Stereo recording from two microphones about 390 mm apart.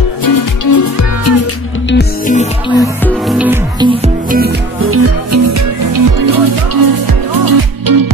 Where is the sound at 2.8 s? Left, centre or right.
Centre.